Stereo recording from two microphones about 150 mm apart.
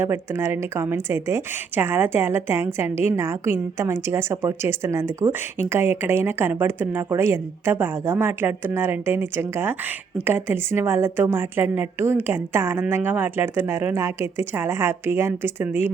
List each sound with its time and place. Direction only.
0.0 s a woman's voice: 15° right (ahead or behind)